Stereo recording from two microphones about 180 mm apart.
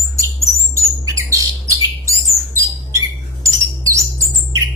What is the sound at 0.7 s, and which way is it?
Bird, 15° right (ahead or behind).